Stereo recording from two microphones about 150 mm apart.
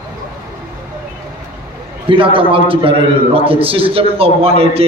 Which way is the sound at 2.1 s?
35° right (ahead or behind).